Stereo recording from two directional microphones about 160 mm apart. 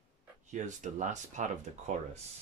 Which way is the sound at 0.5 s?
50° right (ahead or behind).